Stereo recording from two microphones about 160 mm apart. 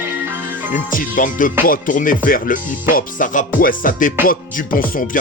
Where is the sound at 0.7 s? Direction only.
55° left (ahead or behind).